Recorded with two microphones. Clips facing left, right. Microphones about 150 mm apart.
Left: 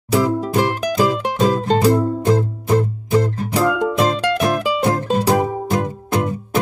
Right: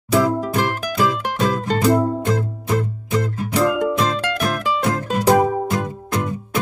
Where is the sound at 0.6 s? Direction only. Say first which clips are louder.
Left 3 dB; 35° left (ahead or behind).